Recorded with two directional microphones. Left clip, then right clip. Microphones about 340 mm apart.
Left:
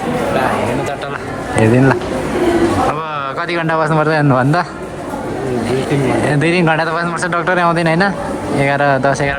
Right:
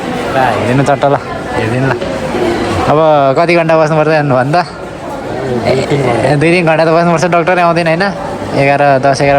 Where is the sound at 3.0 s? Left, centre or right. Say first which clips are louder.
Right 12 dB; centre.